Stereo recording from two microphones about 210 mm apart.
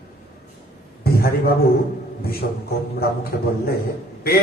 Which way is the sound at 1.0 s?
45° left (ahead or behind).